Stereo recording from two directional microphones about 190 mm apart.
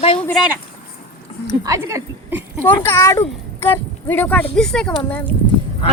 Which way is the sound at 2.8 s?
15° left (ahead or behind).